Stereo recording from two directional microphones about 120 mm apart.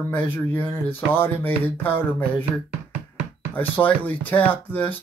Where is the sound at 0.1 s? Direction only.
15° left (ahead or behind).